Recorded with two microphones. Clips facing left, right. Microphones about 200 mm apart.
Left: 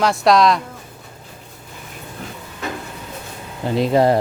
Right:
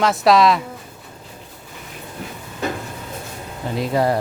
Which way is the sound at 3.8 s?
25° left (ahead or behind).